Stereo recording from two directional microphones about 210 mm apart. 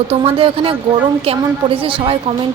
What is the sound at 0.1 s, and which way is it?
Wind chime, 25° right (ahead or behind).